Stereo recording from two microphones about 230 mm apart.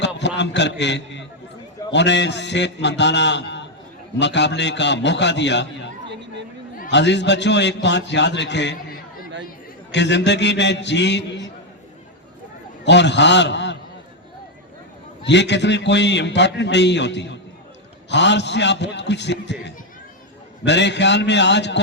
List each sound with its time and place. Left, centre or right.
0.0 s a man's voice: left
6.9 s a man's voice: left
12.8 s a man's voice: left
15.2 s a man's voice: left